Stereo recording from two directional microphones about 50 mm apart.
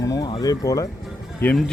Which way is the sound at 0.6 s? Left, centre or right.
Left.